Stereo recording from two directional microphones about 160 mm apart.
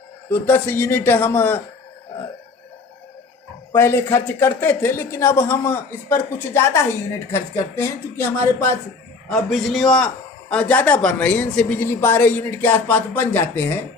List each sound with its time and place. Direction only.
0.3 s speech: 10° left (ahead or behind)
3.7 s speech: 15° left (ahead or behind)
9.3 s a man's voice: centre (ahead or behind)